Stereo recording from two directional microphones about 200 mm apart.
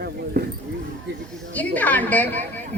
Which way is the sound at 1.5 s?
10° left (ahead or behind).